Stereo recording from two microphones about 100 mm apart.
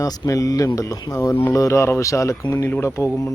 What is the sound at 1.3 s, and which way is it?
Speech, 25° left (ahead or behind).